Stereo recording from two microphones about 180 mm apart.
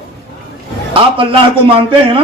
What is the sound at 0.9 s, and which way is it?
Speech, 30° right (ahead or behind).